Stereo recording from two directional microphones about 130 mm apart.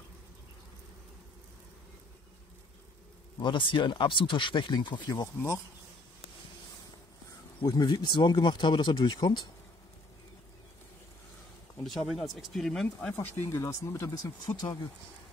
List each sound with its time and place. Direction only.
3.3 s speech: 40° left (ahead or behind)
7.6 s speech: 30° left (ahead or behind)
11.8 s speech: centre (ahead or behind)
13.1 s speech: 20° left (ahead or behind); by 14.8 s 35° left (ahead or behind)